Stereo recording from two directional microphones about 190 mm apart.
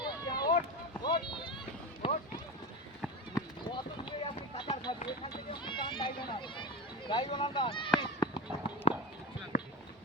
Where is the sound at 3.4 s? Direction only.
25° left (ahead or behind).